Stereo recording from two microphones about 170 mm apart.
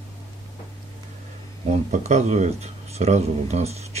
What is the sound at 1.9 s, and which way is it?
Speech, 40° right (ahead or behind).